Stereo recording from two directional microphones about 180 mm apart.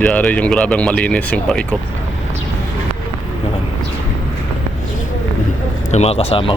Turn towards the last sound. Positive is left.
turn(degrees=30)  # may be behind; listen again after turning